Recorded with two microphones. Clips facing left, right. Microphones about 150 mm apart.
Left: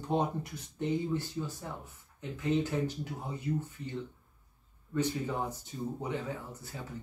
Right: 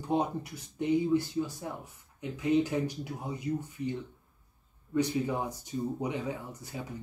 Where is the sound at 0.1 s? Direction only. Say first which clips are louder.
Right 1 dB; 10° right (ahead or behind).